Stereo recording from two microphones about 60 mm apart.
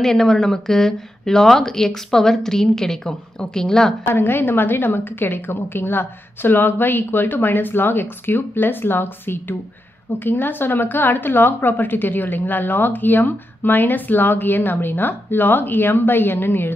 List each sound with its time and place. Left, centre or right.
0.0 s a woman's voice: centre
4.1 s a woman's voice: left